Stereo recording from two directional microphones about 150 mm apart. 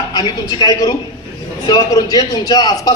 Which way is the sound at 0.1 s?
25° left (ahead or behind).